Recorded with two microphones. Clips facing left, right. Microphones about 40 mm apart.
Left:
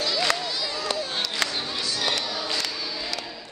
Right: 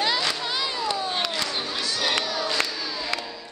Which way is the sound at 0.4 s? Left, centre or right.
Right.